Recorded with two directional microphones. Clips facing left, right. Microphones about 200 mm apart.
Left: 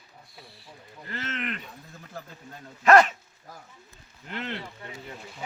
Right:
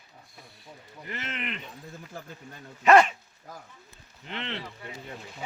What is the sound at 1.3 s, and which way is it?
Speech, centre (ahead or behind).